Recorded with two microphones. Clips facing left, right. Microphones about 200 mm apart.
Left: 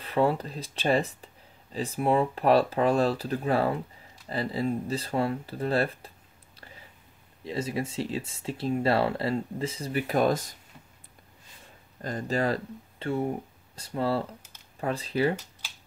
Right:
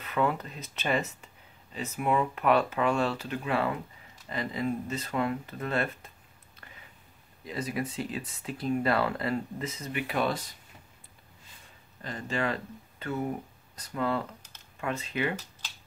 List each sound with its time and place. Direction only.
0.0 s speech: 30° left (ahead or behind)
12.0 s speech: 40° left (ahead or behind)